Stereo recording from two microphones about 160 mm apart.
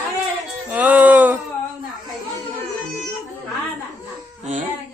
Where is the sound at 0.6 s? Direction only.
10° right (ahead or behind).